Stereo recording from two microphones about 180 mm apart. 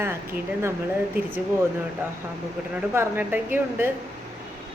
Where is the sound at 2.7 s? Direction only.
10° right (ahead or behind).